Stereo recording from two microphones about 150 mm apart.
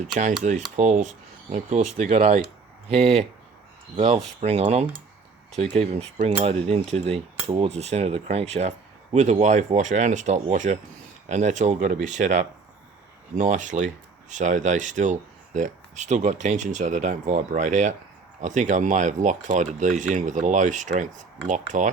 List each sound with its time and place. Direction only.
0.0 s speech: 55° right (ahead or behind)
0.8 s cutlery: 55° right (ahead or behind)
13.3 s speech: 55° right (ahead or behind)